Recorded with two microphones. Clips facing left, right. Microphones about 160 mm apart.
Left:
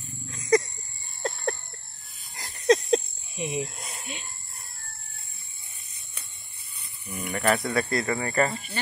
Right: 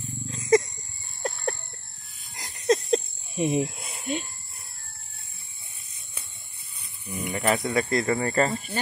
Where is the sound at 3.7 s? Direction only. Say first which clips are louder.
Even; 5° right (ahead or behind).